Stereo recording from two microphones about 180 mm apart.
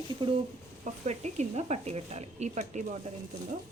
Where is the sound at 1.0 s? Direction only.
40° right (ahead or behind).